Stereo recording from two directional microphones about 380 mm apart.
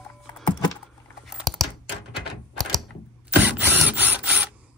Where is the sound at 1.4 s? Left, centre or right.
Centre.